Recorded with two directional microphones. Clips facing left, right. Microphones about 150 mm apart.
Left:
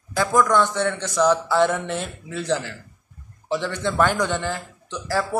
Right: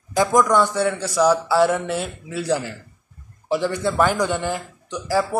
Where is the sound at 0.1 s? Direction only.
15° right (ahead or behind).